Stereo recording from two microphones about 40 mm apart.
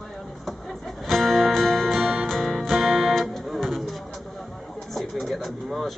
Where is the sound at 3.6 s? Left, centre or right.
Centre.